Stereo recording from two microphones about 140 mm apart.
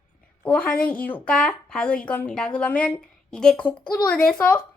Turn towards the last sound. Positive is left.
turn(degrees=10)  # may be behind; listen again after turning